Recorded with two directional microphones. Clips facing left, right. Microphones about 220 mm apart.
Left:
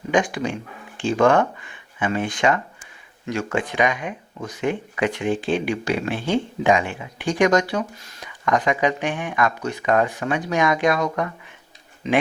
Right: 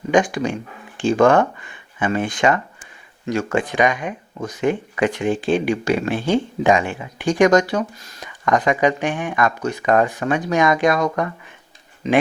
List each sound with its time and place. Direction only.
0.1 s speech: 45° right (ahead or behind)
2.0 s speech: 45° right (ahead or behind)